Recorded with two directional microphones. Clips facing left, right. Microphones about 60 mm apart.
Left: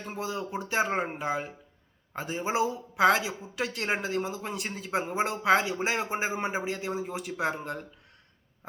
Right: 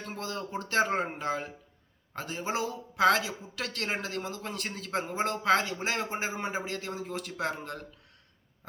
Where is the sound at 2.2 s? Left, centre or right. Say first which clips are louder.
Left 4 dB; centre.